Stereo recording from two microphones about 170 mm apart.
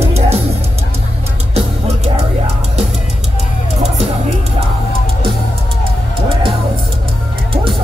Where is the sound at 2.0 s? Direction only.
40° right (ahead or behind).